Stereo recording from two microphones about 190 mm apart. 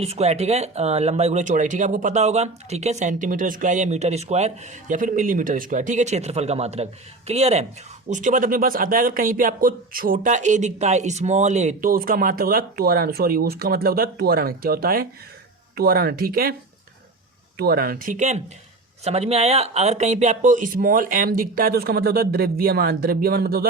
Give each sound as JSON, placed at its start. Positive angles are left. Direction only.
{"t": 0.0, "sound": "speech", "side_deg": -35}
{"t": 17.6, "sound": "speech", "side_deg": -50}